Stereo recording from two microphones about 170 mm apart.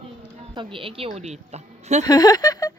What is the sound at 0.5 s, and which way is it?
A woman's voice, 30° right (ahead or behind).